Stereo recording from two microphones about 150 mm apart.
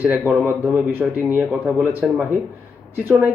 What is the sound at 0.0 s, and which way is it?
Speech, 10° right (ahead or behind).